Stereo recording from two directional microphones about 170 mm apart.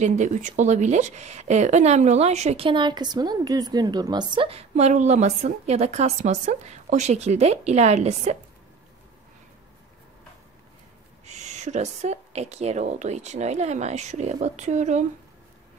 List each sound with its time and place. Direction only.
0.0 s a woman's voice: 45° right (ahead or behind)
11.2 s speech: 45° right (ahead or behind)